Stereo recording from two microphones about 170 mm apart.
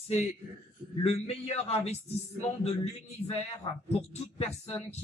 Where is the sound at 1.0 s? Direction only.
35° left (ahead or behind).